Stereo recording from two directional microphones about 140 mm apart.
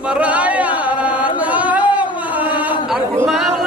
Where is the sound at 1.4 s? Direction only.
10° right (ahead or behind).